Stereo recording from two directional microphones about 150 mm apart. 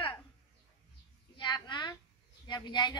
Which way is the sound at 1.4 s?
30° left (ahead or behind).